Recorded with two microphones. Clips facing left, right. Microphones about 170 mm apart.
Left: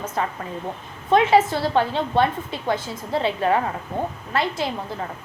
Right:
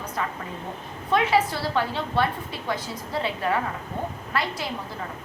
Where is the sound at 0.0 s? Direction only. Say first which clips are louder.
Left 4 dB; 25° left (ahead or behind).